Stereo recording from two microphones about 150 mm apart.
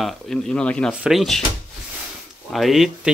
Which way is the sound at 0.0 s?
5° left (ahead or behind).